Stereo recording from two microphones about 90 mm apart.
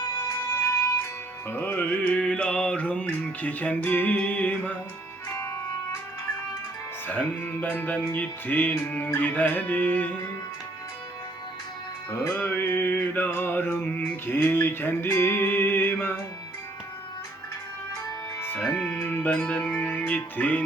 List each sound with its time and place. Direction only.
0.5 s music: 35° left (ahead or behind)
1.5 s music: 25° left (ahead or behind)
5.3 s music: 30° left (ahead or behind)
7.1 s music: 20° left (ahead or behind)
12.1 s music: 30° left (ahead or behind)
18.3 s music: 25° left (ahead or behind)
18.7 s music: 5° left (ahead or behind)
19.0 s music: 15° left (ahead or behind)